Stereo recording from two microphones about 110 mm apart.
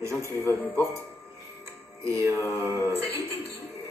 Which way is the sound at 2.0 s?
25° right (ahead or behind).